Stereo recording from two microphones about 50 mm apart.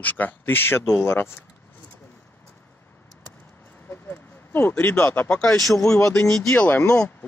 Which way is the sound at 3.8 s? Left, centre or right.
Left.